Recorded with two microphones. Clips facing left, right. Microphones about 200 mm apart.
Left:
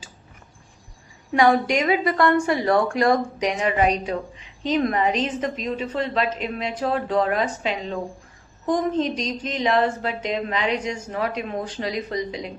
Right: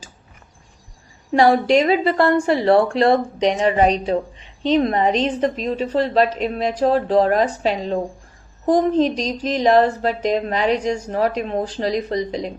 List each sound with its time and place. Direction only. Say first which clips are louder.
1.3 s a woman's voice: right 4 dB; 30° right (ahead or behind)